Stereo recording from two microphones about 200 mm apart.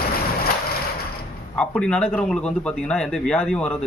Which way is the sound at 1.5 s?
5° left (ahead or behind).